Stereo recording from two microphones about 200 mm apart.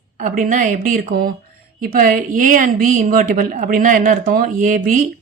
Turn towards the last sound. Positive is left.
turn(degrees=-40)  # may be behind; listen again after turning